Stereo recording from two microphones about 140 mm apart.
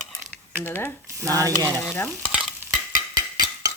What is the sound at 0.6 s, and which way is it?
Stir, 15° left (ahead or behind).